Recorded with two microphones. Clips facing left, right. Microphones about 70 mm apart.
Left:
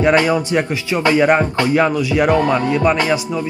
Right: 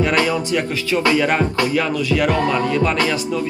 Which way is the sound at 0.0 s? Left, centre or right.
Left.